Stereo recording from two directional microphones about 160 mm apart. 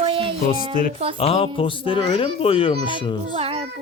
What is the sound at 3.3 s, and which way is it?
Child singing, 35° right (ahead or behind).